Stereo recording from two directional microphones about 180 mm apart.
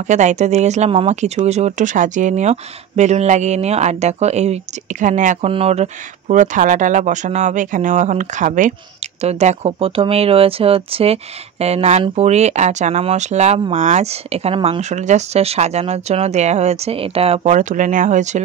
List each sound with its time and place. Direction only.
0.1 s speech: 40° right (ahead or behind)